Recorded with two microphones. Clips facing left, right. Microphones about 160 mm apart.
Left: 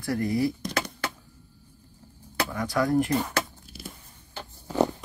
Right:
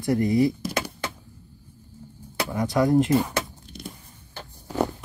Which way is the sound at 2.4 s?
20° right (ahead or behind).